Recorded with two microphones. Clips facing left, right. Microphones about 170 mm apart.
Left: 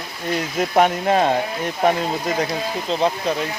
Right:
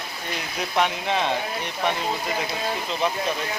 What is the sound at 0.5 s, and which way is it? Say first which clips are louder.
Speech: left 7 dB; 45° left (ahead or behind).